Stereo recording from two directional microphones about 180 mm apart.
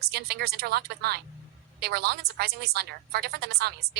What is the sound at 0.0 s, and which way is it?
A woman's voice, 60° right (ahead or behind).